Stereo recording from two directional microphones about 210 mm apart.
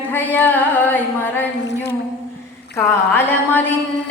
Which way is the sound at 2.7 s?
10° left (ahead or behind).